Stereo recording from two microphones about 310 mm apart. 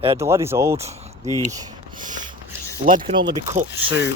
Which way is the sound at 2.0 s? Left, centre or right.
Right.